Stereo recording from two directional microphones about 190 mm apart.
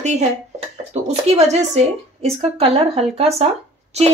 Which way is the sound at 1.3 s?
35° right (ahead or behind).